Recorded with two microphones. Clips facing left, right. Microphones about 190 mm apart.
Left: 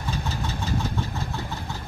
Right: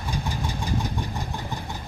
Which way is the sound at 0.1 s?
15° right (ahead or behind).